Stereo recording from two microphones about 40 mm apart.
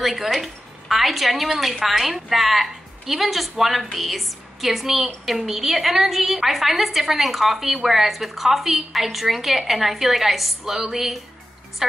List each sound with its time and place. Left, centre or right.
0.0 s a woman's voice: centre